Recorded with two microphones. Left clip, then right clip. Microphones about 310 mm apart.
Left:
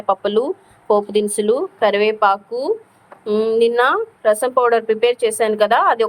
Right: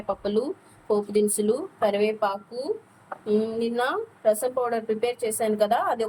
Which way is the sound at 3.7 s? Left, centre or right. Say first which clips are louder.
Left 10 dB; left.